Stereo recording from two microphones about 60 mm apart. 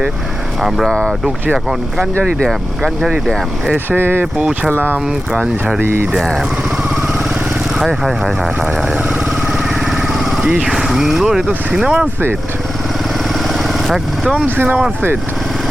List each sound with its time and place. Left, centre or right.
0.9 s speech: centre
3.8 s speech: right
4.4 s speech: centre
5.8 s speech: right
8.0 s vehicle: centre
10.7 s speech: centre
13.5 s vehicle: centre
14.4 s speech: right